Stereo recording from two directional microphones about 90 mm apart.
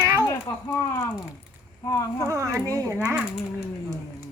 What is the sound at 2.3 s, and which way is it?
Speech, 35° right (ahead or behind).